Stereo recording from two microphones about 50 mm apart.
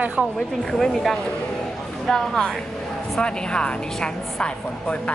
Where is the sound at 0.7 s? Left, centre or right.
Centre.